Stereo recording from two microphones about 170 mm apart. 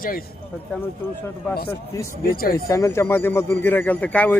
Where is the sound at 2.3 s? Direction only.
60° left (ahead or behind).